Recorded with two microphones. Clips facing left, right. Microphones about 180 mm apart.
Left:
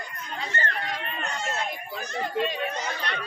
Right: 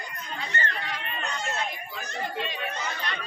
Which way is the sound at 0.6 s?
50° left (ahead or behind).